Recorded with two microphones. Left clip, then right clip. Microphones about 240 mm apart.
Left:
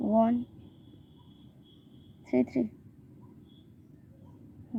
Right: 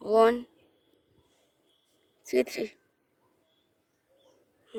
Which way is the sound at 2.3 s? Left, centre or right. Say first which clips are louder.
Right 2 dB; right.